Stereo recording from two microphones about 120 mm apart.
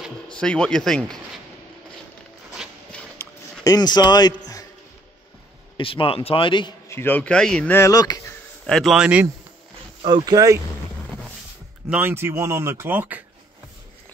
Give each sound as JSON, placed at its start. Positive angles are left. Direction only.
{"t": 0.3, "sound": "speech", "side_deg": 10}
{"t": 2.9, "sound": "a sound", "side_deg": 10}
{"t": 3.6, "sound": "speech", "side_deg": 35}
{"t": 5.8, "sound": "a man's voice", "side_deg": 50}
{"t": 6.9, "sound": "speech", "side_deg": 15}
{"t": 7.7, "sound": "speech", "side_deg": 25}
{"t": 8.6, "sound": "a man's voice", "side_deg": 5}
{"t": 8.9, "sound": "a man's voice", "side_deg": -10}
{"t": 10.0, "sound": "speech", "side_deg": -35}
{"t": 11.9, "sound": "speech", "side_deg": -15}